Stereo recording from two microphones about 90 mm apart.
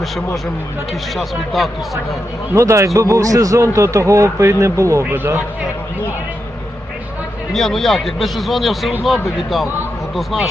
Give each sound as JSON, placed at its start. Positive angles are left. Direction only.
{"t": 1.1, "sound": "speech", "side_deg": 0}
{"t": 2.6, "sound": "a man's voice", "side_deg": -35}
{"t": 5.0, "sound": "speech", "side_deg": -25}
{"t": 7.5, "sound": "speech", "side_deg": 5}